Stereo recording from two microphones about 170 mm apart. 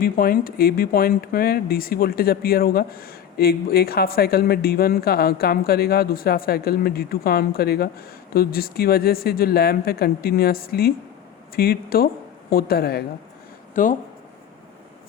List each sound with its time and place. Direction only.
0.0 s speech: 55° left (ahead or behind)
13.8 s speech: 50° left (ahead or behind)